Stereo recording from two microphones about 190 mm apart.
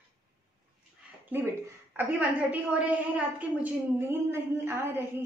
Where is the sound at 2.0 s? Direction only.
10° right (ahead or behind).